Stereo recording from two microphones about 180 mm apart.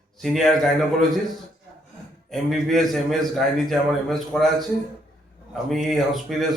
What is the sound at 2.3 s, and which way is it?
A man's voice, centre (ahead or behind).